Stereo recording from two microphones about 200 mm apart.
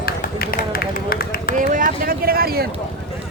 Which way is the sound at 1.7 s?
45° right (ahead or behind).